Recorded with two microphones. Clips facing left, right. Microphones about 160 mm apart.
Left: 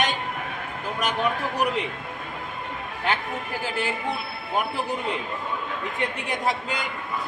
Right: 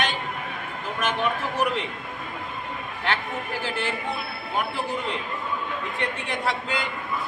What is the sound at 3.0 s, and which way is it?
Speech, 15° left (ahead or behind).